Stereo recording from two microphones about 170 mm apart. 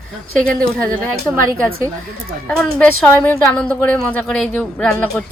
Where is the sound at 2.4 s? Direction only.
5° left (ahead or behind).